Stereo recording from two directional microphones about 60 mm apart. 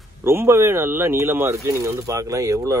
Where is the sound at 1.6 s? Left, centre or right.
Right.